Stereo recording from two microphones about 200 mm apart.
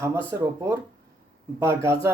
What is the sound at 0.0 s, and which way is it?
Speech, 10° right (ahead or behind).